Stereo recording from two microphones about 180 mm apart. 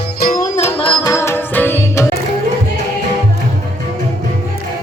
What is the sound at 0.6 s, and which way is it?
Music, 35° left (ahead or behind).